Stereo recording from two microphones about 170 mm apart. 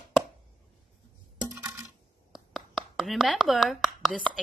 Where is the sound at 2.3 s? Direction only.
Centre (ahead or behind).